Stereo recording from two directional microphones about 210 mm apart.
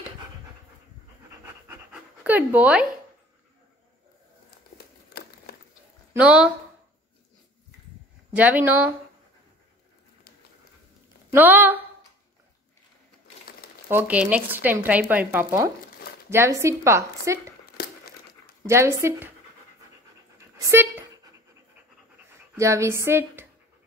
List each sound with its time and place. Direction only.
1.3 s pant: 10° right (ahead or behind)
4.7 s crumpling: 45° left (ahead or behind)
6.1 s speech: 5° right (ahead or behind)
8.4 s speech: 10° right (ahead or behind)
11.3 s speech: 10° right (ahead or behind)
13.8 s speech: 10° right (ahead or behind)
17.8 s crumpling: 45° left (ahead or behind)
18.7 s speech: 15° right (ahead or behind)
20.3 s dog: 15° right (ahead or behind)
22.6 s speech: 15° right (ahead or behind)